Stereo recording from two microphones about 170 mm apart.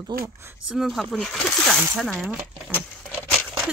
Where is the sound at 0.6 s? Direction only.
5° right (ahead or behind).